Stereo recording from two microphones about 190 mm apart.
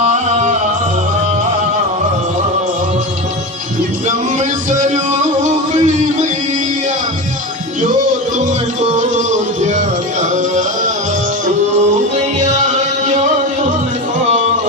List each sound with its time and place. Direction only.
0.0 s music: 40° right (ahead or behind)
4.4 s music: 40° right (ahead or behind)
8.4 s music: 40° right (ahead or behind)
12.1 s music: 40° right (ahead or behind)